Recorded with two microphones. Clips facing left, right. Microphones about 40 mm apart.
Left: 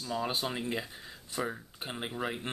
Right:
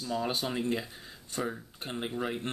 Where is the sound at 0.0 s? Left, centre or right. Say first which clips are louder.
Right 1 dB; centre.